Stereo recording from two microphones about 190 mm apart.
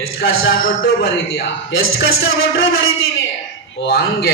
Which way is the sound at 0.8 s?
50° left (ahead or behind).